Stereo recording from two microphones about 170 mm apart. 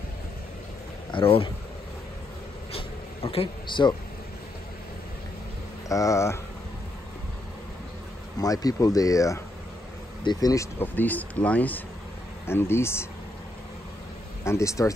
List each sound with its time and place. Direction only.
1.1 s speech: 30° left (ahead or behind)
2.7 s a sound: 35° left (ahead or behind)
5.9 s speech: 20° left (ahead or behind)
8.4 s speech: 20° left (ahead or behind)
14.4 s speech: 15° left (ahead or behind)